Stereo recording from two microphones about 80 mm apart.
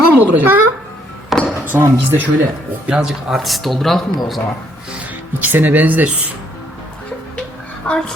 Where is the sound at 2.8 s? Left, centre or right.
Centre.